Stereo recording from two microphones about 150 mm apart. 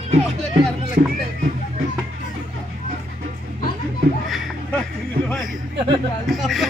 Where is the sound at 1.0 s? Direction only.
75° right (ahead or behind).